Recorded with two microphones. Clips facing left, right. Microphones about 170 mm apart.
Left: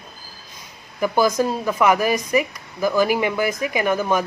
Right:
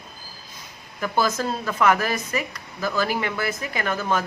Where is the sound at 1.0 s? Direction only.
10° left (ahead or behind).